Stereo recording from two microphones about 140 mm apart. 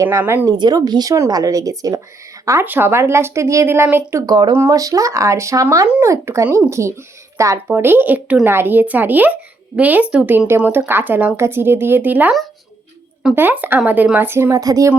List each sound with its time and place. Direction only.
0.0 s a woman's voice: 20° right (ahead or behind)
0.4 s a woman's voice: 30° right (ahead or behind)
4.3 s a woman's voice: 30° right (ahead or behind); by 12.3 s 10° right (ahead or behind)
13.3 s a woman's voice: 15° right (ahead or behind)